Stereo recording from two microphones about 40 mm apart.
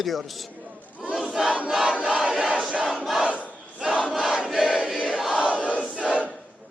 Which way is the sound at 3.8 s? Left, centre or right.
Centre.